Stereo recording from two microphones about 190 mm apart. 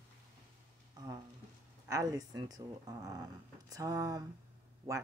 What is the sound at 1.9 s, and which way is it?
Speech, 20° right (ahead or behind).